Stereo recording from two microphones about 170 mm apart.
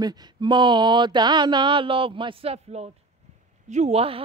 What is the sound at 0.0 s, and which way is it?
Speech, 25° right (ahead or behind).